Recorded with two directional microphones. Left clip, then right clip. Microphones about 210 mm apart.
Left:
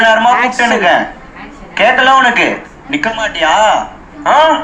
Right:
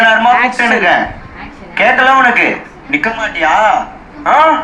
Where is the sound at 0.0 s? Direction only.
55° left (ahead or behind).